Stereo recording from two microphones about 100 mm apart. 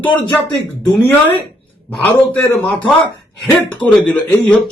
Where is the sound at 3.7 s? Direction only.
15° left (ahead or behind).